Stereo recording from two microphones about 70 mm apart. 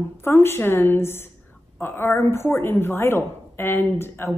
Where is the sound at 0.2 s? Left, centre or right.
Left.